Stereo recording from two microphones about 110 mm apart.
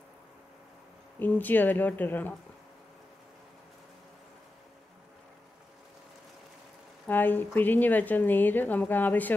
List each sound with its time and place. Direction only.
1.2 s a woman's voice: 15° left (ahead or behind)
7.1 s a woman's voice: 15° left (ahead or behind)